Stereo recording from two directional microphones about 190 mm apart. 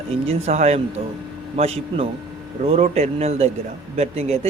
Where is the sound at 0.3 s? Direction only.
35° right (ahead or behind).